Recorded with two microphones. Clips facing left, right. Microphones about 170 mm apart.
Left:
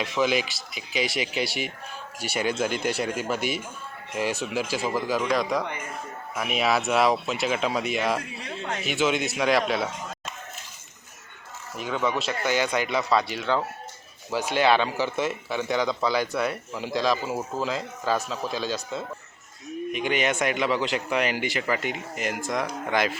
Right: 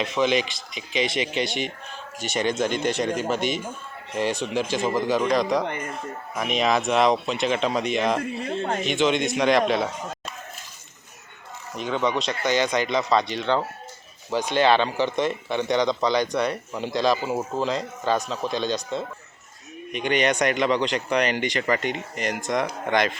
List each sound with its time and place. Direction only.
0.2 s speech: 5° left (ahead or behind)
8.2 s speech: 50° right (ahead or behind)
8.8 s speech: 5° left (ahead or behind)
12.2 s speech: 5° left (ahead or behind)